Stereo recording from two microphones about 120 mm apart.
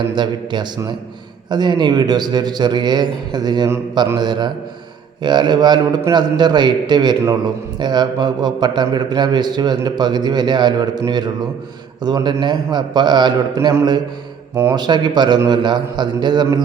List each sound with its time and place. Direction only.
0.1 s a man's voice: 40° right (ahead or behind)
14.5 s speech: 15° right (ahead or behind)
14.8 s a man's voice: 40° right (ahead or behind)